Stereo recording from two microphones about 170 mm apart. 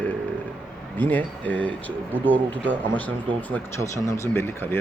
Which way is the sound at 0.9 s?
10° left (ahead or behind).